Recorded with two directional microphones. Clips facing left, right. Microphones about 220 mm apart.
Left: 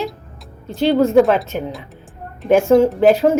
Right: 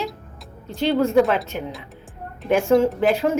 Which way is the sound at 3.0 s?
40° left (ahead or behind).